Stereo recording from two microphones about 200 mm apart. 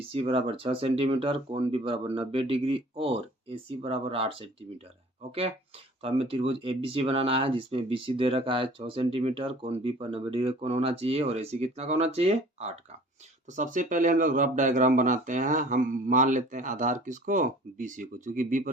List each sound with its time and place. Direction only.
0.1 s speech: 30° right (ahead or behind)
6.0 s speech: 30° right (ahead or behind)